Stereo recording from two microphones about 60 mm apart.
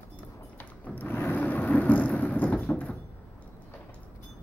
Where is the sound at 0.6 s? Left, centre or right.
Left.